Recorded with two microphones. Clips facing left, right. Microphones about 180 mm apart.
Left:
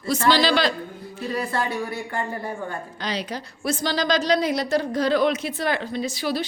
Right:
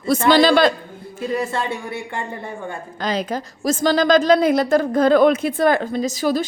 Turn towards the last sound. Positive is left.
turn(degrees=-45)  # may be behind; listen again after turning